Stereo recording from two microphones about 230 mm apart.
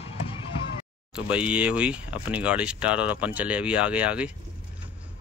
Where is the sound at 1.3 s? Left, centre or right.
Centre.